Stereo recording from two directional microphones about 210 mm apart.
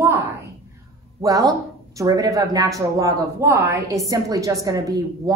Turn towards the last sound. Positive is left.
turn(degrees=-15)  # may be behind; listen again after turning